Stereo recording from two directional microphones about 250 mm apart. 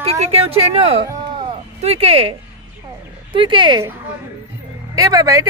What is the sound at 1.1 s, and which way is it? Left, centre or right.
Music, centre.